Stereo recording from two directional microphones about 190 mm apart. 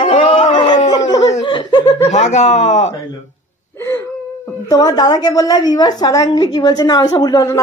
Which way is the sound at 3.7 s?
15° left (ahead or behind).